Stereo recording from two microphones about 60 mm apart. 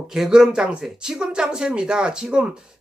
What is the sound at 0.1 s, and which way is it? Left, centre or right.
A man's voice, centre.